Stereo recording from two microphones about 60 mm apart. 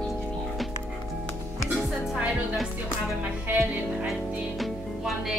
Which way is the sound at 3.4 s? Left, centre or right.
Right.